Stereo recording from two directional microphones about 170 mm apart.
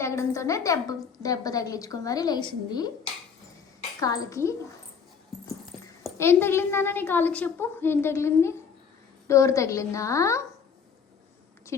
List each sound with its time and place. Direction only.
0.0 s a woman's voice: 15° left (ahead or behind)
4.0 s a woman's voice: 20° left (ahead or behind)
6.1 s a woman's voice: 15° left (ahead or behind)
11.7 s a woman's voice: 15° left (ahead or behind)